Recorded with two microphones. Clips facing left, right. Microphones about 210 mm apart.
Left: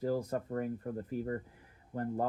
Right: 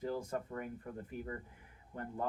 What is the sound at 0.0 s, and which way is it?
Speech, 40° left (ahead or behind).